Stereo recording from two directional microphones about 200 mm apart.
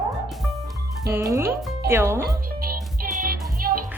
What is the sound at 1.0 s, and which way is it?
Speech, 15° right (ahead or behind).